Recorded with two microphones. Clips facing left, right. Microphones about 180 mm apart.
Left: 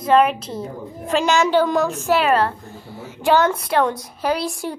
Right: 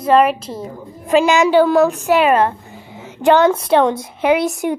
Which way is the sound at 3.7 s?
25° right (ahead or behind).